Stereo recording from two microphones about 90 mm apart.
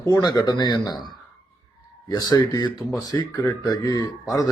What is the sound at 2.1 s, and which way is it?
Speech, 45° left (ahead or behind).